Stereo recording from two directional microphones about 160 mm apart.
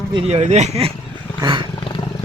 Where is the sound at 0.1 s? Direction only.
35° right (ahead or behind).